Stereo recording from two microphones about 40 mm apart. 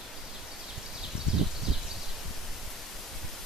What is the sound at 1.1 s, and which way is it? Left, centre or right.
Rustling leaves, right.